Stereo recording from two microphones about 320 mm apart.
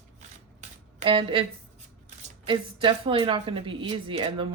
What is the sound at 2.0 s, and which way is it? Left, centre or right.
Speech, centre.